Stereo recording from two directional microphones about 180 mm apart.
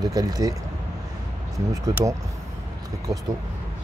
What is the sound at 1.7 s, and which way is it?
Speech, 20° right (ahead or behind).